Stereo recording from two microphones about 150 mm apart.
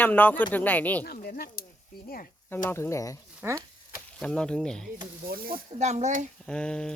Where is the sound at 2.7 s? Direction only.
20° left (ahead or behind).